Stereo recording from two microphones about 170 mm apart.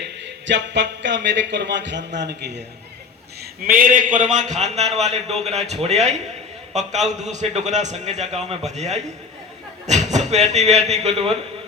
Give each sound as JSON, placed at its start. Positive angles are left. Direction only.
{"t": 0.0, "sound": "a man's voice", "side_deg": -90}
{"t": 3.4, "sound": "a man's voice", "side_deg": -55}